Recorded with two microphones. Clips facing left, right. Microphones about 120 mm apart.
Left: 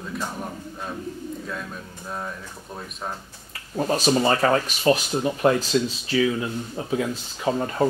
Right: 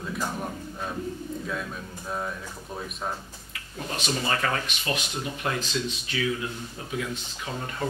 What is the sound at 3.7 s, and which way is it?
Speech, 40° left (ahead or behind).